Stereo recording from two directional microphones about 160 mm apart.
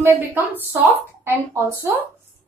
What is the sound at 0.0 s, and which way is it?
A woman's voice, 10° right (ahead or behind).